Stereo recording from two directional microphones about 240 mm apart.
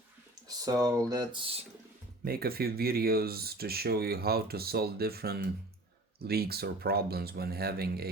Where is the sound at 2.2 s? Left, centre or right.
Right.